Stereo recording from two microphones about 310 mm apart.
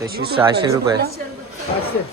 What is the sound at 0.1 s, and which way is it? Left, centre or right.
Speech, right.